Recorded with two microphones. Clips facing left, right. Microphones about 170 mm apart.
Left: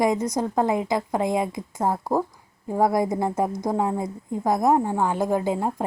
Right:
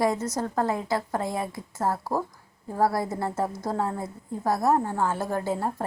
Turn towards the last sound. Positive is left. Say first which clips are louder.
# left 4 dB
turn(degrees=15)  # may be behind; listen again after turning